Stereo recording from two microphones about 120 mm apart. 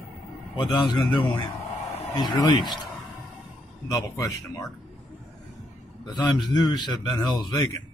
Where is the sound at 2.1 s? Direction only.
40° left (ahead or behind).